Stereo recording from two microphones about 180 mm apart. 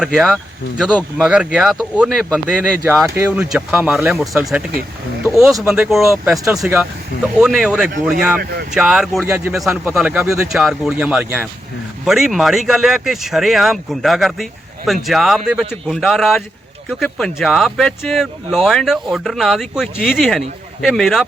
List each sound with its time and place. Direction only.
0.0 s speech: centre (ahead or behind)
8.4 s speech: 60° right (ahead or behind)
8.7 s speech: 5° right (ahead or behind)